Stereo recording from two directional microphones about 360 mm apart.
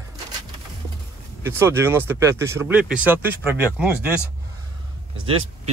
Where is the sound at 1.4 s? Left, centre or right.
Centre.